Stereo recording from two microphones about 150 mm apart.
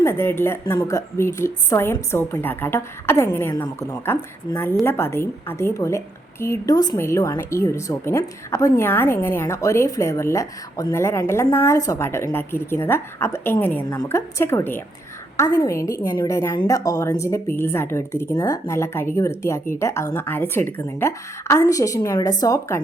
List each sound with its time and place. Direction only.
0.0 s a woman's voice: 15° left (ahead or behind)